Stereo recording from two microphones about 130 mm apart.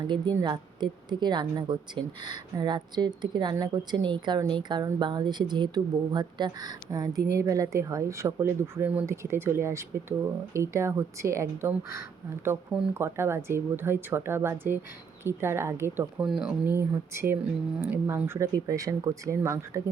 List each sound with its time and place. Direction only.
0.4 s a woman's voice: 35° right (ahead or behind)
12.7 s a woman's voice: 20° right (ahead or behind)
16.2 s speech: 5° right (ahead or behind)
16.6 s a woman's voice: 15° right (ahead or behind)